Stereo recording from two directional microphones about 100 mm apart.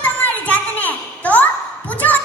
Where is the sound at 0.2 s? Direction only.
15° left (ahead or behind).